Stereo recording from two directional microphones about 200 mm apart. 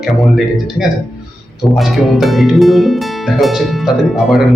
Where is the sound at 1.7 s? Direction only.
Centre (ahead or behind).